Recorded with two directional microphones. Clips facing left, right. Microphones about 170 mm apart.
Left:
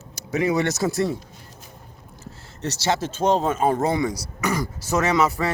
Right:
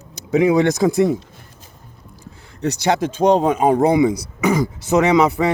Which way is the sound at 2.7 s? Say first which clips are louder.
Right 5 dB; 15° right (ahead or behind).